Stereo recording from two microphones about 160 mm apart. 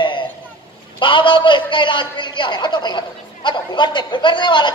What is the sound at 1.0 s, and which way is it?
A man's voice, 30° left (ahead or behind).